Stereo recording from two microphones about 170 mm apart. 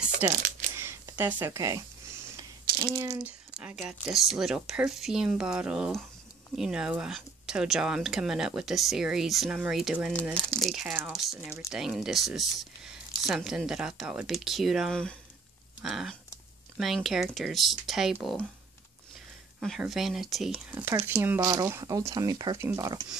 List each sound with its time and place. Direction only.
0.2 s speech: 10° right (ahead or behind)
2.7 s a sound: 60° right (ahead or behind)
3.0 s speech: 10° right (ahead or behind)
19.6 s speech: centre (ahead or behind)
20.7 s speech: 15° right (ahead or behind)